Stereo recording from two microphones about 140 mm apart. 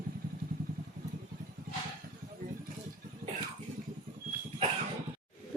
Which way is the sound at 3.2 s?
90° right.